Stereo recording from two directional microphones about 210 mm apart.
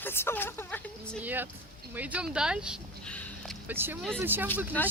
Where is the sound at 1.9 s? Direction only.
5° right (ahead or behind).